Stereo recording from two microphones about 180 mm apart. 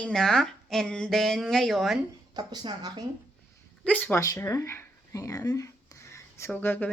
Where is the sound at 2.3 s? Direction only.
25° right (ahead or behind).